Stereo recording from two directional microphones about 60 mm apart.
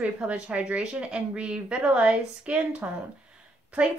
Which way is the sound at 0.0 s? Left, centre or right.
Right.